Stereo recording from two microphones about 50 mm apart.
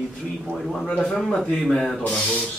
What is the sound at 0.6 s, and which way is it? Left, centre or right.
Speech, centre.